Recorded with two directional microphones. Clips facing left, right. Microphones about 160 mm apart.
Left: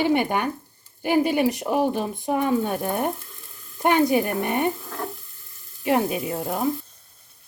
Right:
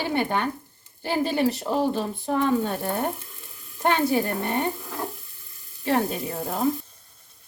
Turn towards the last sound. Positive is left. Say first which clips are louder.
# left 2 dB
turn(degrees=10)  # may be behind; listen again after turning